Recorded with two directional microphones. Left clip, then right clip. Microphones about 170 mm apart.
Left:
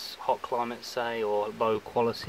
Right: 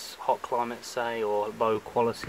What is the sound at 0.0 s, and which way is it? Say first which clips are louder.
Speech: right 1 dB; centre (ahead or behind).